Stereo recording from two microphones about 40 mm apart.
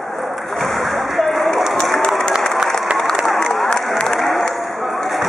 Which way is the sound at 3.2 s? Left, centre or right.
Centre.